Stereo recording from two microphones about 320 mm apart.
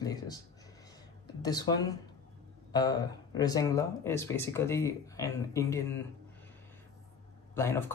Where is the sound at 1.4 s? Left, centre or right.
Centre.